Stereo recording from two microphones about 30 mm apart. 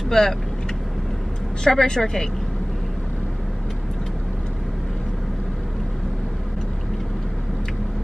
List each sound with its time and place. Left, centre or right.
0.1 s speech: centre
1.6 s speech: centre